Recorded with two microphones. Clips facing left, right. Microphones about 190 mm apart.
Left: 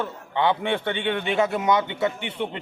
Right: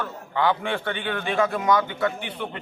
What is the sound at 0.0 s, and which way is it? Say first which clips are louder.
A man's voice: left 1 dB; 25° left (ahead or behind).